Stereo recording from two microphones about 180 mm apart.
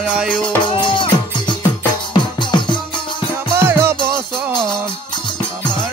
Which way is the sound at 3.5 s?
15° right (ahead or behind).